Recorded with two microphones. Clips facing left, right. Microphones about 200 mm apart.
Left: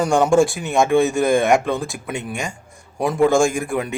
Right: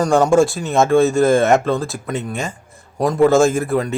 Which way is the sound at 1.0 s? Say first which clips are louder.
Right 4 dB; centre (ahead or behind).